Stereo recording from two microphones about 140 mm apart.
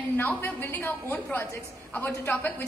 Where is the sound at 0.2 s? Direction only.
15° left (ahead or behind).